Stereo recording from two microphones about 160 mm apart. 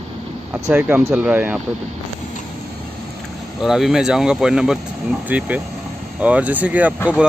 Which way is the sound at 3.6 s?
Centre (ahead or behind).